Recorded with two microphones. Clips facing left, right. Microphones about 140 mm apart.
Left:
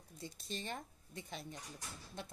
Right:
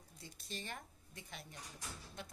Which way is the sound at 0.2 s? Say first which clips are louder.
Left 4 dB; 25° left (ahead or behind).